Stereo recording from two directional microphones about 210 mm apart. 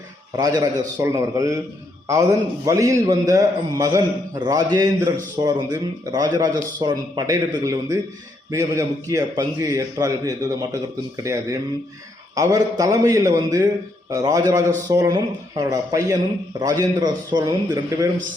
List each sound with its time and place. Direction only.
0.3 s a man's voice: 20° right (ahead or behind)
12.3 s a man's voice: 15° right (ahead or behind)